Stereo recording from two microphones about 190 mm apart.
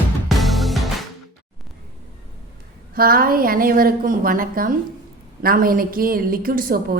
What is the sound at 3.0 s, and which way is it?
Speech, 50° right (ahead or behind).